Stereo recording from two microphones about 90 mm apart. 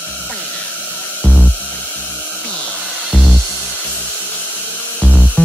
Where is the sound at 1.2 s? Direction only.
20° left (ahead or behind).